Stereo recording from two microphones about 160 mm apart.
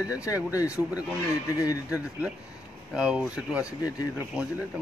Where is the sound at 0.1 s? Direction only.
20° left (ahead or behind).